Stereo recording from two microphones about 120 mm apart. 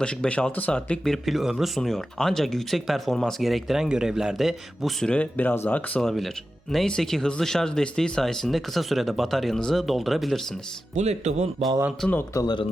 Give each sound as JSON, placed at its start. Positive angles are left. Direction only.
{"t": 0.0, "sound": "speech", "side_deg": 5}
{"t": 10.9, "sound": "speech", "side_deg": -70}
{"t": 12.3, "sound": "speech", "side_deg": 25}